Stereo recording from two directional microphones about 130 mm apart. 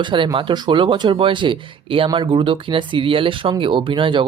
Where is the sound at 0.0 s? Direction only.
40° right (ahead or behind).